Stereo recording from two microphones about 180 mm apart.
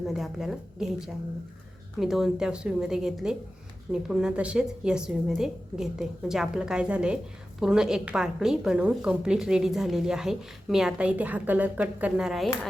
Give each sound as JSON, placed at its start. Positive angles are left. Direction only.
{"t": 0.0, "sound": "a woman's voice", "side_deg": 0}